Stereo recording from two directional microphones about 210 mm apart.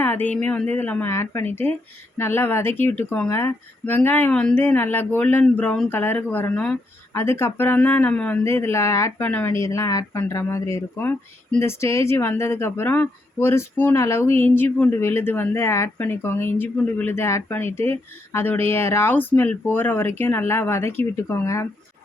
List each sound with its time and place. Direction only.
0.0 s a woman's voice: 10° left (ahead or behind)